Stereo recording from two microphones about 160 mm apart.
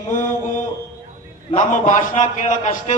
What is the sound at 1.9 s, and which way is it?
A man's voice, 50° left (ahead or behind).